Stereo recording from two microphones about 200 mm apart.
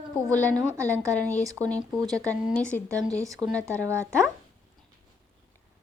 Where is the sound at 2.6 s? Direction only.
5° left (ahead or behind).